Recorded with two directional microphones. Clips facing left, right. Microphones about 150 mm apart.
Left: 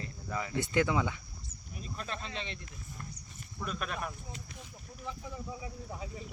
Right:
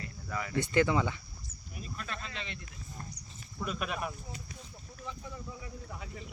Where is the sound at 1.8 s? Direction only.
30° left (ahead or behind).